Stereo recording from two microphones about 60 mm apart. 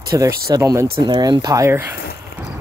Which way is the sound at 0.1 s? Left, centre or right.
Right.